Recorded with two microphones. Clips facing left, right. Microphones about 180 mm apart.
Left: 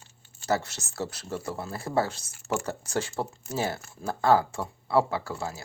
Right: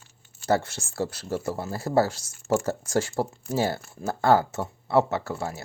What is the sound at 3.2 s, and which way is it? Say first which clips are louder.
Speech: right 4 dB; 30° right (ahead or behind).